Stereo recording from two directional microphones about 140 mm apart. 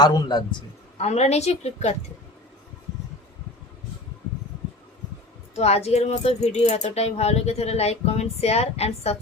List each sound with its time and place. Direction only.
0.0 s a man's voice: 30° left (ahead or behind)
0.9 s speech: 50° left (ahead or behind)
5.5 s speech: 50° left (ahead or behind)